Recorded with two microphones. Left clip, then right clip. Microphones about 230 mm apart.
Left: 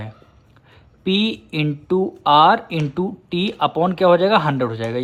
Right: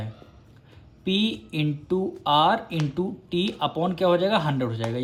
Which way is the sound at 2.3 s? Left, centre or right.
Left.